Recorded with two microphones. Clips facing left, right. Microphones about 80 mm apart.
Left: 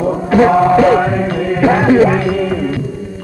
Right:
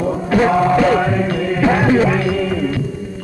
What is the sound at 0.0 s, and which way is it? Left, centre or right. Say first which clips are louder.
Music: left 4 dB; left.